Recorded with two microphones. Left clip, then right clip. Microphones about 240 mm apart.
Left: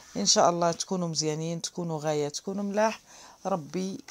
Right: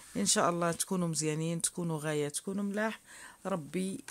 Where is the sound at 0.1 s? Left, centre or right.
Right.